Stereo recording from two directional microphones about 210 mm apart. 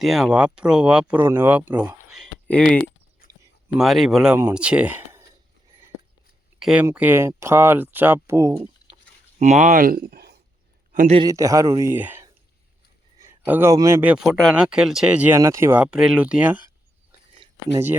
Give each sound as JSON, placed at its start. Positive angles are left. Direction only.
{"t": 0.0, "sound": "speech", "side_deg": 0}
{"t": 6.6, "sound": "speech", "side_deg": -5}
{"t": 9.4, "sound": "speech", "side_deg": -35}
{"t": 10.9, "sound": "a man's voice", "side_deg": -35}
{"t": 11.2, "sound": "speech", "side_deg": -15}